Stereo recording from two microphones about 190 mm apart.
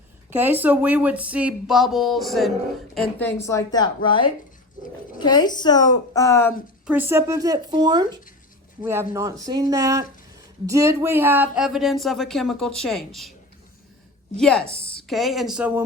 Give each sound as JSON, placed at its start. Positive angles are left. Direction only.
{"t": 0.3, "sound": "a woman's voice", "side_deg": -10}
{"t": 6.8, "sound": "speech", "side_deg": -10}
{"t": 14.3, "sound": "speech", "side_deg": 5}